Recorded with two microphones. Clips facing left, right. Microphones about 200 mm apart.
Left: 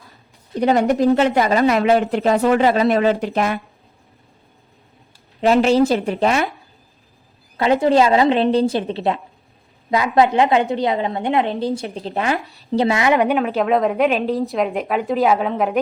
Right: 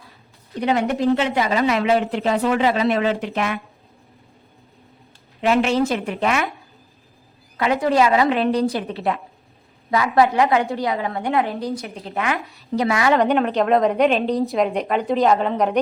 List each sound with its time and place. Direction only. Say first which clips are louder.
0.6 s speech: left 4 dB; 40° left (ahead or behind)
5.4 s a woman's voice: left 4 dB; 35° left (ahead or behind)
7.5 s a woman's voice: left 4 dB; 30° left (ahead or behind)
13.1 s speech: even; 5° left (ahead or behind)